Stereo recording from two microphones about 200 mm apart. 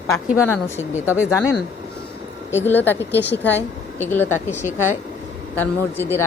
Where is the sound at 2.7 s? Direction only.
10° left (ahead or behind).